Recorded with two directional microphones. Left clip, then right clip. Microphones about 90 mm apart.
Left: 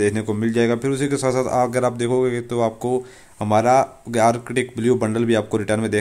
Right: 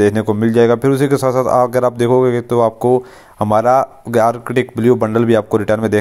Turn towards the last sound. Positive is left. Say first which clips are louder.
# right 7 dB
turn(degrees=-40)  # may be behind; listen again after turning